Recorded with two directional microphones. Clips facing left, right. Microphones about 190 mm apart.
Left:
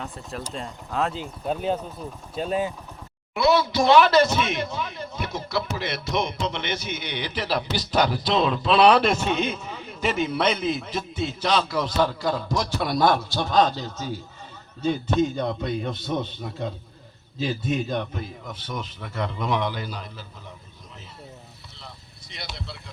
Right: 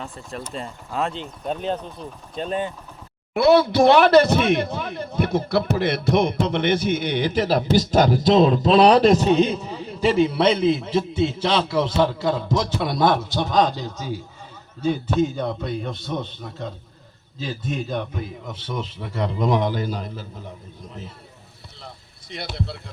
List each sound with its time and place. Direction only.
0.0 s speech: centre (ahead or behind)
3.3 s speech: 55° right (ahead or behind); by 16.6 s 5° left (ahead or behind)
17.7 s speech: centre (ahead or behind)
18.2 s a man's voice: 25° right (ahead or behind); by 20.5 s 50° right (ahead or behind)
21.8 s a sound: 55° right (ahead or behind)